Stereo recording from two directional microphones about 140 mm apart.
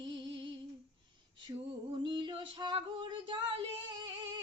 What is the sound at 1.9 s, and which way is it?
Female singing, 35° right (ahead or behind).